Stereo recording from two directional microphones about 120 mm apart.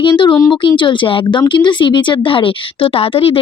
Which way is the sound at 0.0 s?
45° left (ahead or behind).